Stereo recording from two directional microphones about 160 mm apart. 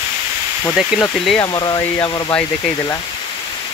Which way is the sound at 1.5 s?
25° left (ahead or behind).